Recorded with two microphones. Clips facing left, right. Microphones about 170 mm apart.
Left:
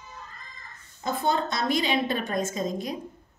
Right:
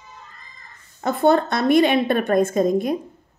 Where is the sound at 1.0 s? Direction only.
60° right (ahead or behind).